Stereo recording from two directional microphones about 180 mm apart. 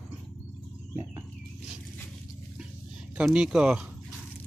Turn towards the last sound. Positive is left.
turn(degrees=-5)  # may be behind; listen again after turning